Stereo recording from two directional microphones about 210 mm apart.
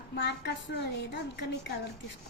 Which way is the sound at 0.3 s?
55° left (ahead or behind).